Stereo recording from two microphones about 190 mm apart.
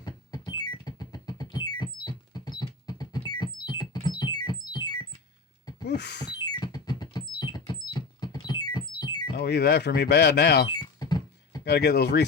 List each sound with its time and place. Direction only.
0.0 s synthesizer: 20° left (ahead or behind)
4.2 s music: 20° left (ahead or behind)
5.8 s a sound: 60° left (ahead or behind)
6.4 s music: 20° left (ahead or behind)
9.4 s speech: 60° left (ahead or behind)
10.7 s a sound: 20° left (ahead or behind)
11.6 s speech: 60° left (ahead or behind)